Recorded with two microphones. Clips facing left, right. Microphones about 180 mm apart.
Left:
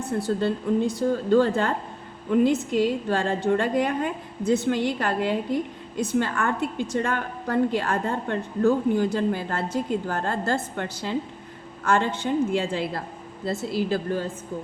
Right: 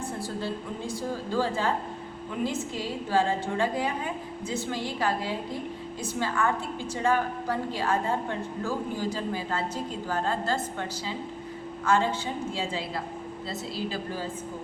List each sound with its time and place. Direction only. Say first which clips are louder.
0.2 s a woman's voice: left 8 dB; 65° left (ahead or behind)